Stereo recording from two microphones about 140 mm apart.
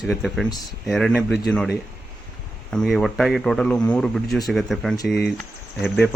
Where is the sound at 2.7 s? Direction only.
Centre (ahead or behind).